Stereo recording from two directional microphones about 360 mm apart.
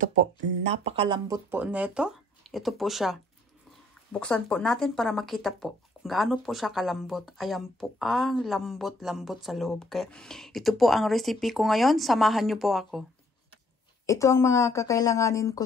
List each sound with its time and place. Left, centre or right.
0.0 s speech: centre
14.0 s a woman's voice: centre